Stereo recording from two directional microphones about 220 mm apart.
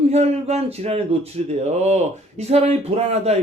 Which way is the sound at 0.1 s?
30° right (ahead or behind).